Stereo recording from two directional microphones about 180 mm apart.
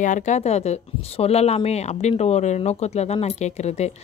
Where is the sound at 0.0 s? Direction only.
40° left (ahead or behind).